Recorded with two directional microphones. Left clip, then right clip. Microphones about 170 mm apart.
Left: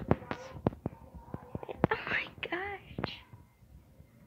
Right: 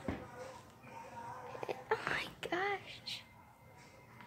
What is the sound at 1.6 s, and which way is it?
Whispering, 15° right (ahead or behind).